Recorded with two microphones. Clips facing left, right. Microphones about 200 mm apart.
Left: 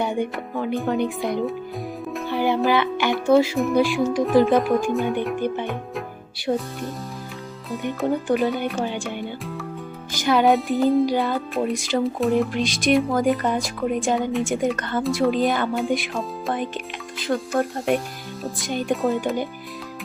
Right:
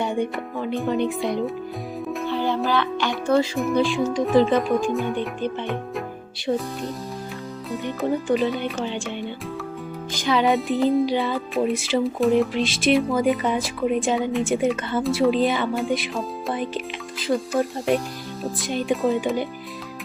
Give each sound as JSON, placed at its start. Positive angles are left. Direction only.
{"t": 0.0, "sound": "speech", "side_deg": 5}
{"t": 2.3, "sound": "music", "side_deg": 15}
{"t": 2.6, "sound": "speech", "side_deg": 15}
{"t": 8.0, "sound": "speech", "side_deg": 0}